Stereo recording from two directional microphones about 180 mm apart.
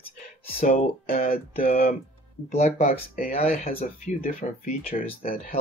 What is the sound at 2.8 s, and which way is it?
Speech, 50° left (ahead or behind).